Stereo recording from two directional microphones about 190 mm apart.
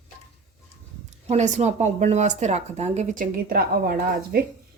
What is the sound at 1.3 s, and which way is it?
Speech, 40° right (ahead or behind).